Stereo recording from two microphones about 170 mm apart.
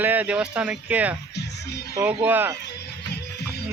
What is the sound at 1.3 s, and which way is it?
Music, 75° left (ahead or behind).